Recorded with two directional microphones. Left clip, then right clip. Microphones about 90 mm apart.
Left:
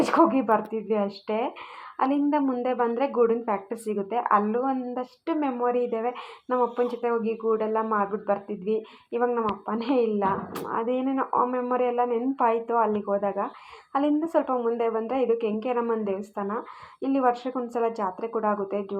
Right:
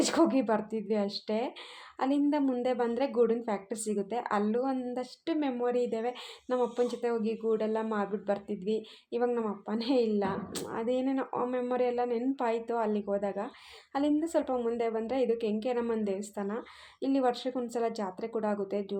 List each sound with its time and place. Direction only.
0.0 s a woman's voice: 25° right (ahead or behind)
13.9 s a woman's voice: 20° right (ahead or behind)
14.4 s speech: 40° right (ahead or behind)
15.3 s a woman's voice: 25° right (ahead or behind)